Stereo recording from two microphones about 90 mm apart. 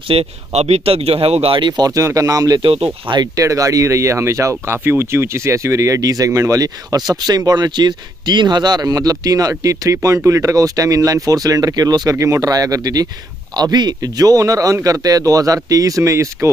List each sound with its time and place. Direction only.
0.1 s speech: 90° right
1.7 s speech: 45° right (ahead or behind)
2.6 s speech: 80° right
3.3 s speech: 35° right (ahead or behind)